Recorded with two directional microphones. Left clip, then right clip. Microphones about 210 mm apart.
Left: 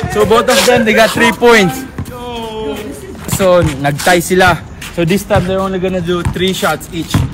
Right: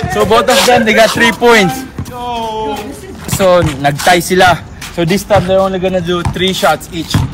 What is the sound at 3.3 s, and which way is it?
A man's voice, 5° left (ahead or behind).